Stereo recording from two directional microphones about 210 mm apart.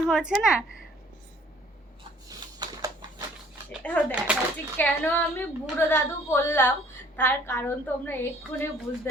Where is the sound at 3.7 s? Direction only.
5° left (ahead or behind).